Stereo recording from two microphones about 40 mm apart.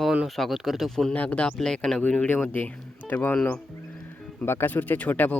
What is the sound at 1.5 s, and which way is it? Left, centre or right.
Speech, centre.